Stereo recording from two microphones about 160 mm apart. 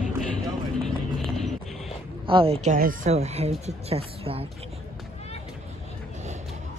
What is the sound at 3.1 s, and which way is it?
Speech, 40° right (ahead or behind).